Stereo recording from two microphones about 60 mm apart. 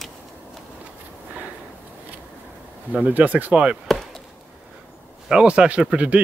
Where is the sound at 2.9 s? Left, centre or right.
Right.